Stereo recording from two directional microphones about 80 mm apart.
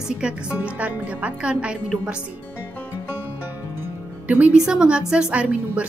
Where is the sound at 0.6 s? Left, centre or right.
Centre.